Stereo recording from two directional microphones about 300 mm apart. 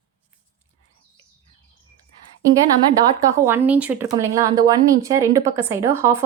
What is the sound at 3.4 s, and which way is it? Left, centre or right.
Speech, centre.